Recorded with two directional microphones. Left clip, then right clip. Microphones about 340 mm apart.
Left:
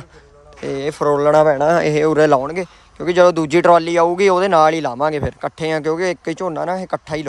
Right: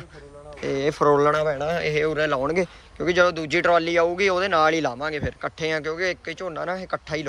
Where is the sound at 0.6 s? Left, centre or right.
Centre.